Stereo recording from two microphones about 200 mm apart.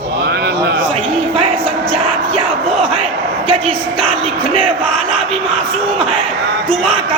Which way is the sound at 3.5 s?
30° right (ahead or behind).